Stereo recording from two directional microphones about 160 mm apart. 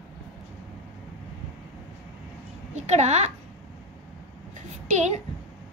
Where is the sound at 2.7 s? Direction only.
45° right (ahead or behind).